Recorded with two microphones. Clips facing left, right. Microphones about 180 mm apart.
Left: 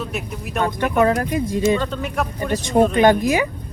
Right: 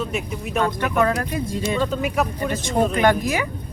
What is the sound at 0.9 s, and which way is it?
Speech, 20° left (ahead or behind).